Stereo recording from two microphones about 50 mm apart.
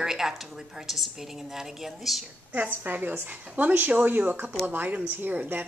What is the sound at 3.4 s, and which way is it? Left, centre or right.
Speech, right.